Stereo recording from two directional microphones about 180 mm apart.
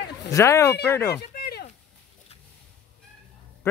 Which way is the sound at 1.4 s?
60° left (ahead or behind).